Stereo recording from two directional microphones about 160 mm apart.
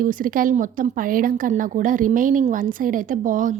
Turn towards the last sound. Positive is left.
turn(degrees=-55)  # may be behind; listen again after turning